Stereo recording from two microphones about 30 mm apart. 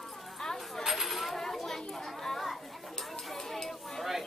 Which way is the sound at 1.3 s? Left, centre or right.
Centre.